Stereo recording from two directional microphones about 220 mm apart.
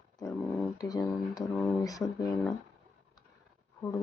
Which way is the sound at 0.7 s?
15° left (ahead or behind).